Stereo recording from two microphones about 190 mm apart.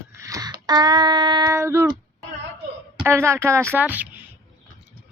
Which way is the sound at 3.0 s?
15° right (ahead or behind).